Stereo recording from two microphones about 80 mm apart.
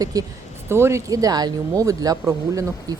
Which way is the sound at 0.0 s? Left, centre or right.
Right.